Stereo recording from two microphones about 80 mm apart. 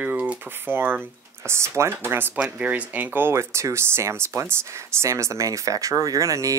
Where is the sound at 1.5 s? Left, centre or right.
Right.